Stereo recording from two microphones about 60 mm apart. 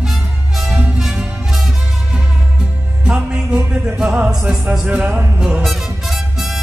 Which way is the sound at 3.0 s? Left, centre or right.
Centre.